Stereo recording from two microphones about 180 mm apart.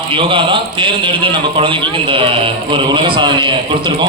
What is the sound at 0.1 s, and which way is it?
A man's voice, 30° right (ahead or behind).